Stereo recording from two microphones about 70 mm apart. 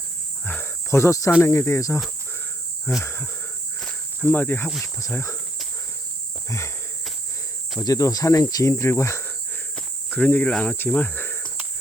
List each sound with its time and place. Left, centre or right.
0.4 s cricket: left
1.4 s speech: left
3.0 s speech: left
5.1 s speech: left
6.5 s speech: left
7.9 s speech: left
8.7 s speech: left
9.7 s cricket: centre
10.6 s speech: left
11.1 s cricket: left